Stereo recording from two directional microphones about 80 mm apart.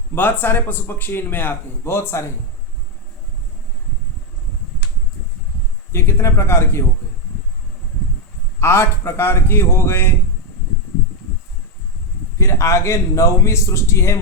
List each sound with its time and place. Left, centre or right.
0.1 s a man's voice: left
5.9 s a man's voice: left
8.6 s a man's voice: left
12.4 s a man's voice: left